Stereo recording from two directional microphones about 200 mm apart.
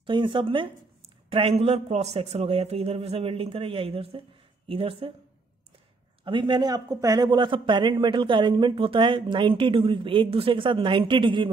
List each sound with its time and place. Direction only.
0.0 s speech: 25° right (ahead or behind)
6.2 s speech: 25° right (ahead or behind)